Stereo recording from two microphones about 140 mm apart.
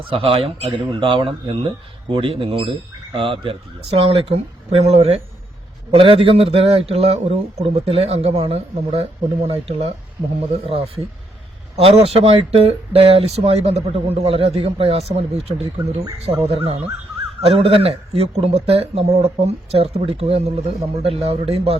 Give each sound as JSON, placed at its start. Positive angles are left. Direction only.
{"t": 0.1, "sound": "speech", "side_deg": -40}